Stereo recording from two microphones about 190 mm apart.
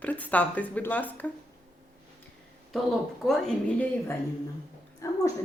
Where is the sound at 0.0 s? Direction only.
10° left (ahead or behind).